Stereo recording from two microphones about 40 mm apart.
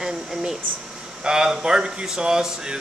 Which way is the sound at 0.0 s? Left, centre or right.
Centre.